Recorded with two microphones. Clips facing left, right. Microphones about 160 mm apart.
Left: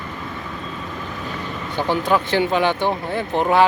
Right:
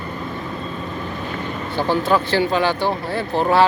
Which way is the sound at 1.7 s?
15° left (ahead or behind).